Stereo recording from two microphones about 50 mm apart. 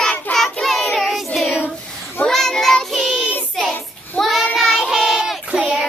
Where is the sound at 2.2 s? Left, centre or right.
Centre.